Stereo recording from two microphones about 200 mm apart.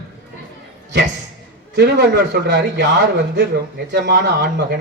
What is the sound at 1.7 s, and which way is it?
Speech, 55° right (ahead or behind).